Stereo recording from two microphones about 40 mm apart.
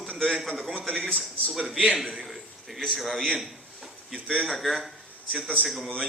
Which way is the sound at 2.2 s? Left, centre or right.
Centre.